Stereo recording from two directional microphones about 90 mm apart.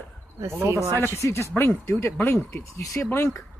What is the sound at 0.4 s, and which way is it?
Speech, 30° right (ahead or behind).